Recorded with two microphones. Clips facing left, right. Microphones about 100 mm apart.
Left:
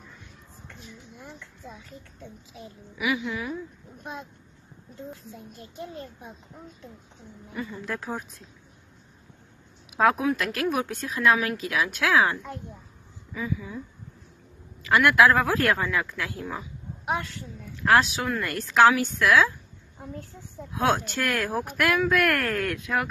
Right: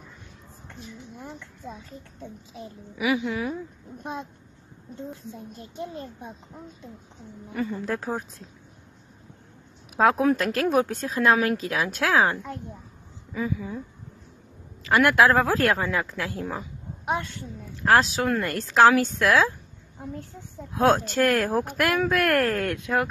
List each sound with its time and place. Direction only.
2.5 s a woman's voice: 30° right (ahead or behind)
7.8 s a woman's voice: 35° right (ahead or behind)
9.9 s a woman's voice: 30° right (ahead or behind)
14.8 s a woman's voice: 30° right (ahead or behind)
20.7 s a woman's voice: 35° right (ahead or behind)